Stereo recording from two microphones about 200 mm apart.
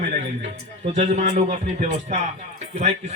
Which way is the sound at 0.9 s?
35° right (ahead or behind).